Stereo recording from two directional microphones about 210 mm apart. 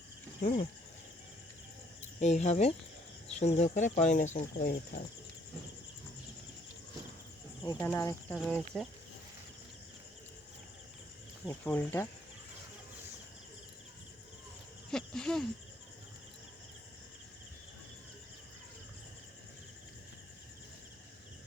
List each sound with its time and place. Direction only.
2.1 s speech: 35° left (ahead or behind)
7.6 s speech: 15° left (ahead or behind)
11.4 s speech: 10° left (ahead or behind)
14.8 s cricket: 5° left (ahead or behind)